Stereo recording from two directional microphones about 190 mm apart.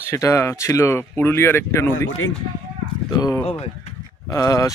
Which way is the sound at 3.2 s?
20° left (ahead or behind).